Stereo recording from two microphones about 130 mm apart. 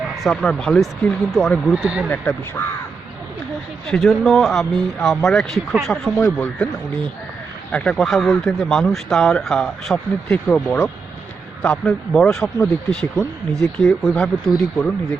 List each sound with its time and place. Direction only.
0.2 s speech: 5° left (ahead or behind)
1.8 s speech: 5° right (ahead or behind)
2.6 s speech: 15° left (ahead or behind)
3.8 s speech: 5° left (ahead or behind)
6.1 s speech: 15° left (ahead or behind)
7.7 s speech: 10° left (ahead or behind)
13.5 s speech: centre (ahead or behind)